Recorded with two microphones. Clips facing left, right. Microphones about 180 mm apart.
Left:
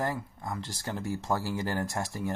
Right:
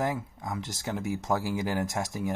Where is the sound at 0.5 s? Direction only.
15° right (ahead or behind).